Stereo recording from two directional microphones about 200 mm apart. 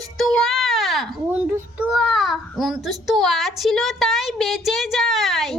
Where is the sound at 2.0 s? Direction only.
Centre (ahead or behind).